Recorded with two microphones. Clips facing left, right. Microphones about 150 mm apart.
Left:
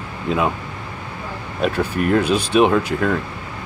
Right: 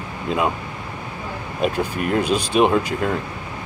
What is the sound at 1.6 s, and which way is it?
Speech, 10° right (ahead or behind).